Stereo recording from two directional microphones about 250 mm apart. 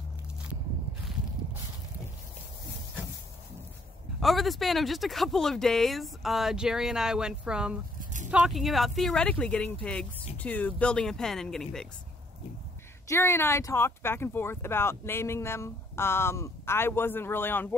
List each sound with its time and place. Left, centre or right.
4.2 s speech: centre
8.0 s a sound: right
8.3 s speech: centre
13.1 s speech: centre